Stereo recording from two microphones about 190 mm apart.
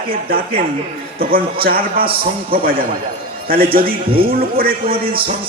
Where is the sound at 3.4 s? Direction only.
50° right (ahead or behind).